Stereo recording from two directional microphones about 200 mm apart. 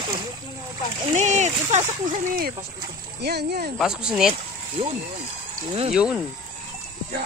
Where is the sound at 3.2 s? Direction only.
55° right (ahead or behind).